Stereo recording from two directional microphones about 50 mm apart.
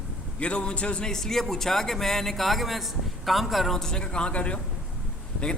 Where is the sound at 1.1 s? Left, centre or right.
Centre.